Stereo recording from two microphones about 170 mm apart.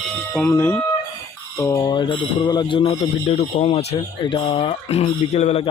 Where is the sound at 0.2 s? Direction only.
10° left (ahead or behind); by 2.9 s 25° left (ahead or behind).